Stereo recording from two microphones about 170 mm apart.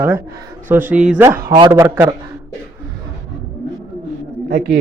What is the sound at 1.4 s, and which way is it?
Speech, 25° right (ahead or behind).